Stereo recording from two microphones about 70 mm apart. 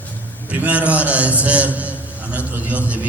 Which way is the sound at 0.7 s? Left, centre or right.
Centre.